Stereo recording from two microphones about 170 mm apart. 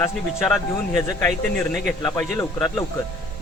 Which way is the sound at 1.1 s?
10° left (ahead or behind).